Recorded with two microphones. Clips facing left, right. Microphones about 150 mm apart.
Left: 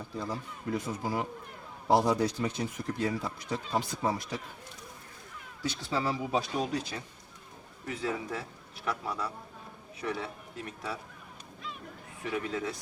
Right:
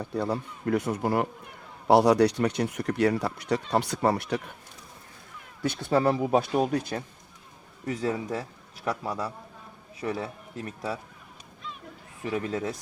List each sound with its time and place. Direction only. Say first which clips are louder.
0.0 s speech: right 8 dB; 65° right (ahead or behind)
5.6 s speech: right 8 dB; 55° right (ahead or behind)
7.9 s a man's voice: right 5 dB; 40° right (ahead or behind)
12.3 s a man's voice: right 4 dB; 40° right (ahead or behind)